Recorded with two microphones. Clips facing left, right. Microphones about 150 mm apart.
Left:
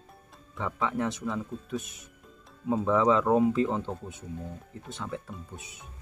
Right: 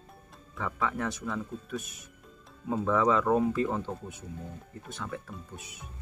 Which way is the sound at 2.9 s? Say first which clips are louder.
Left 2 dB; 20° left (ahead or behind).